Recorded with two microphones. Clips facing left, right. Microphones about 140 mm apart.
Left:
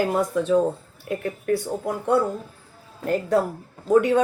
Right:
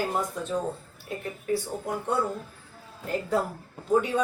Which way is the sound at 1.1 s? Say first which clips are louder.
Left 6 dB; 65° left (ahead or behind).